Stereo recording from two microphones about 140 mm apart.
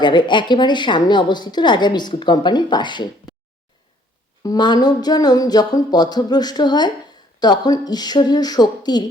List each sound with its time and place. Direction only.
0.0 s a woman's voice: 35° left (ahead or behind)
4.4 s speech: 30° left (ahead or behind)